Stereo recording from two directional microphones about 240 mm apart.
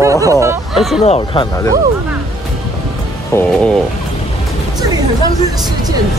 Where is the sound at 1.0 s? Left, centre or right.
Left.